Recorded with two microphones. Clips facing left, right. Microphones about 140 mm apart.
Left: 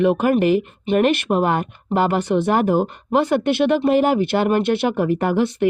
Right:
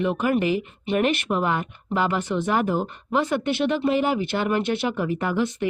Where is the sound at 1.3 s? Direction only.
40° left (ahead or behind).